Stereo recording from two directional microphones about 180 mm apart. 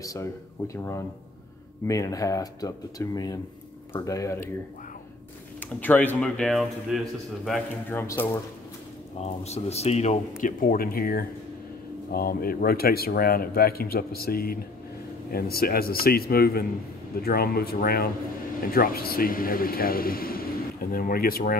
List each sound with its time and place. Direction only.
0.0 s speech: 20° left (ahead or behind)
1.9 s speech: 20° left (ahead or behind)
5.8 s speech: 10° left (ahead or behind)
7.9 s speech: 15° left (ahead or behind)
9.2 s a man's voice: 35° left (ahead or behind); by 21.5 s 55° left (ahead or behind)